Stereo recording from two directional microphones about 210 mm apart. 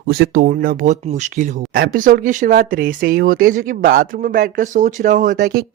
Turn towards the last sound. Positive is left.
turn(degrees=-45)  # may be behind; listen again after turning